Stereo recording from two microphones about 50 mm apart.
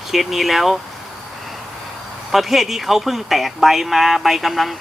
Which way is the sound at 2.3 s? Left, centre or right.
Centre.